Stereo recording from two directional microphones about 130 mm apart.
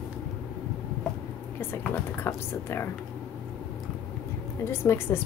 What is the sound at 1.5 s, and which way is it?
Speech, 15° left (ahead or behind).